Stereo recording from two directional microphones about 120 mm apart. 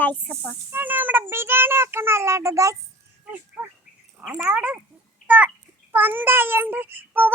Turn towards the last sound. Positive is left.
turn(degrees=-15)  # may be behind; listen again after turning